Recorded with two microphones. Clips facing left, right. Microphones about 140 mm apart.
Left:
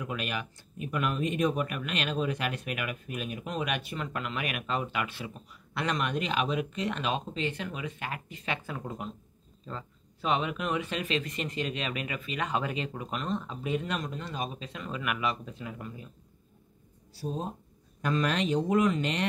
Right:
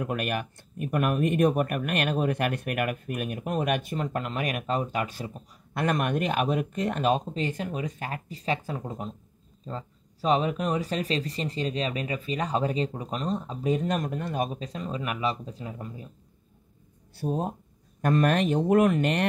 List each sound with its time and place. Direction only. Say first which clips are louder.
0.0 s speech: right 5 dB; 50° right (ahead or behind); by 16.1 s 35° right (ahead or behind)
17.1 s speech: right 6 dB; 60° right (ahead or behind)